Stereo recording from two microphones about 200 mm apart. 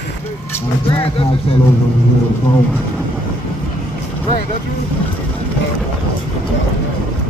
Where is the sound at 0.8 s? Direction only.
25° left (ahead or behind).